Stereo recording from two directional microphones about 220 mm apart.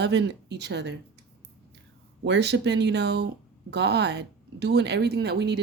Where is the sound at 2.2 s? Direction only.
50° right (ahead or behind).